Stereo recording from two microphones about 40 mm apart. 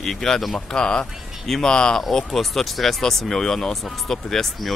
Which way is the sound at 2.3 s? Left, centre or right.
Centre.